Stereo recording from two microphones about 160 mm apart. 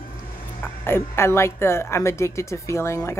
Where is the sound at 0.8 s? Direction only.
15° left (ahead or behind).